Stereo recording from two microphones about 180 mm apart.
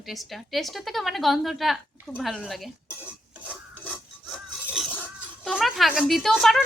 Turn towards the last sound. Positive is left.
turn(degrees=0)  # may be behind; listen again after turning